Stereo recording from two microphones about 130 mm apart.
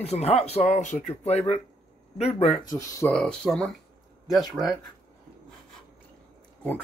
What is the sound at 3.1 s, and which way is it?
Speech, 5° left (ahead or behind).